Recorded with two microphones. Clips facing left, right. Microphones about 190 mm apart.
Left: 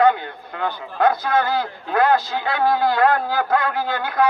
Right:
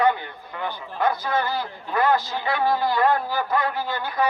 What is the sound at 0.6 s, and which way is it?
A man's voice, 60° left (ahead or behind).